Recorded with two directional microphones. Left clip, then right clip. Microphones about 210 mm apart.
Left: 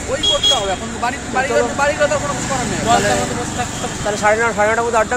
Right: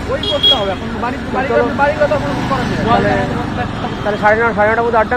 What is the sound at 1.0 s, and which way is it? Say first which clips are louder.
Speech: even; 60° left (ahead or behind).